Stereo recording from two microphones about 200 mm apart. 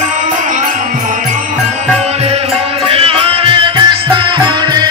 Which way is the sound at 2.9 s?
30° right (ahead or behind).